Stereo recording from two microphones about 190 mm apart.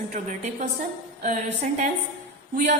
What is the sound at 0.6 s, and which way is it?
A man's voice, 40° right (ahead or behind).